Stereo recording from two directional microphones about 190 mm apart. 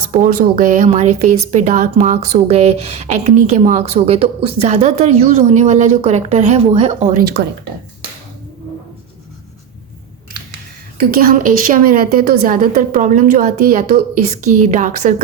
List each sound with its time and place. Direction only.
0.1 s a woman's voice: 45° right (ahead or behind)
11.1 s a woman's voice: 50° right (ahead or behind)